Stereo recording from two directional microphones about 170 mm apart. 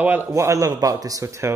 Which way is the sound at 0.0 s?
10° right (ahead or behind).